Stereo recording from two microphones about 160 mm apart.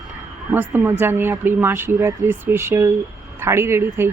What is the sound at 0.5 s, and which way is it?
Speech, 15° right (ahead or behind).